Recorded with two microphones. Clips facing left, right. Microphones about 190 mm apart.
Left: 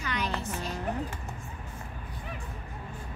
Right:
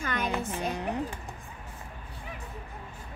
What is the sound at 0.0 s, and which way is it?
Music, 50° right (ahead or behind).